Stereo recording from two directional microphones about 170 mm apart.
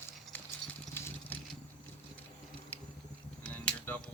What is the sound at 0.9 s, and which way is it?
Vehicle, 15° left (ahead or behind).